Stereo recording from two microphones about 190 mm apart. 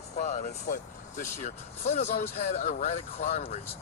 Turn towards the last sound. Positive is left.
turn(degrees=35)  # may be behind; listen again after turning